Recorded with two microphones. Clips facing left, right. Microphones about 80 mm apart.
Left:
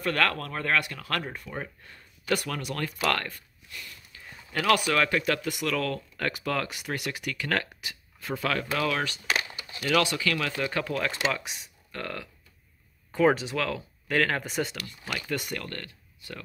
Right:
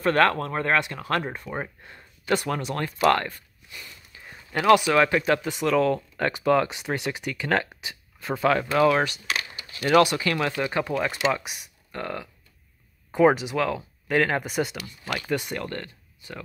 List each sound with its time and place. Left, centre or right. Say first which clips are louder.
0.0 s speech: right 6 dB; right; by 15.0 s centre
15.1 s speech: right 4 dB; centre